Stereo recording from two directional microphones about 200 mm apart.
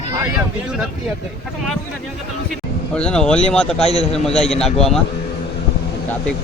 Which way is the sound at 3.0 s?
5° left (ahead or behind).